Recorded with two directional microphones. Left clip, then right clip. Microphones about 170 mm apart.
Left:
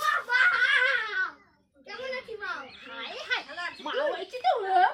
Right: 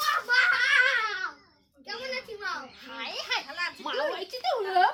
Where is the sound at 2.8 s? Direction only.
20° right (ahead or behind).